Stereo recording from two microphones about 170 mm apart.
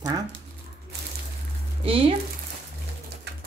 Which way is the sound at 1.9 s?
35° right (ahead or behind).